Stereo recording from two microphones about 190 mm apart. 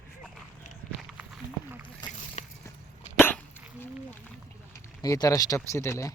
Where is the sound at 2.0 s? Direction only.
20° left (ahead or behind).